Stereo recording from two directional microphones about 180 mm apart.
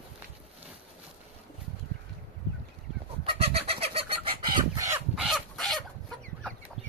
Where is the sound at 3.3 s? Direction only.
30° right (ahead or behind).